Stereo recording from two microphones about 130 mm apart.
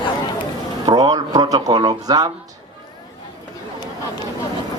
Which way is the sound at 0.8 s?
30° right (ahead or behind).